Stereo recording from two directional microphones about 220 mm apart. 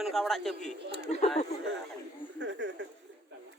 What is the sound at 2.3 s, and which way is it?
Speech, 55° right (ahead or behind).